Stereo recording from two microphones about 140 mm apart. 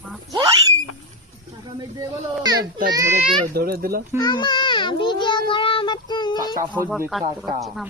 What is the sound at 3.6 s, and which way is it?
Speech, 90° right.